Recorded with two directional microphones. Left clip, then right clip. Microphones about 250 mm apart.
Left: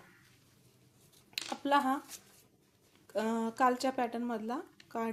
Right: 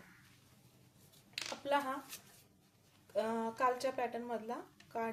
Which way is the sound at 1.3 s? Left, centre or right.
Left.